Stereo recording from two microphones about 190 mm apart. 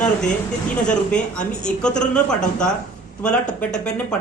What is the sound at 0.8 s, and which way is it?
Speech, 5° left (ahead or behind).